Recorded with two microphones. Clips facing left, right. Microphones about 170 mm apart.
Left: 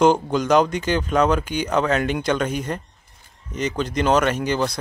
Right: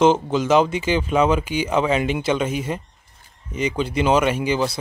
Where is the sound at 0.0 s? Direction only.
5° right (ahead or behind).